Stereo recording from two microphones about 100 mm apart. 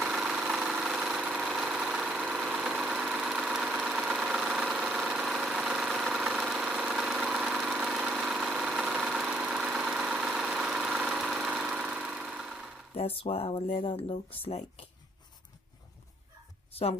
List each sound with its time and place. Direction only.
0.0 s engine: 5° right (ahead or behind)
12.9 s speech: 75° left (ahead or behind)